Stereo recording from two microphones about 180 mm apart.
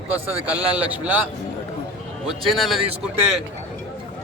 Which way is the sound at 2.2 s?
Centre (ahead or behind).